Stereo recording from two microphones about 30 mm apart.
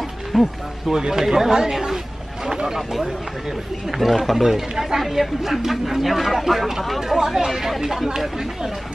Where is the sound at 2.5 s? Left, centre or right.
Centre.